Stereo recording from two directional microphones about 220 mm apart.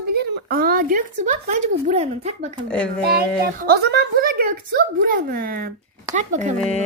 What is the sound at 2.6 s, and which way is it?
Speech, 5° left (ahead or behind).